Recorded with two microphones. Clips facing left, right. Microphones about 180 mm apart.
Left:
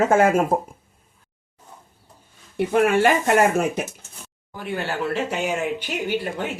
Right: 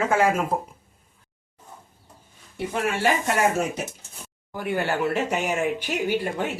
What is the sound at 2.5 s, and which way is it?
Speech, 60° left (ahead or behind).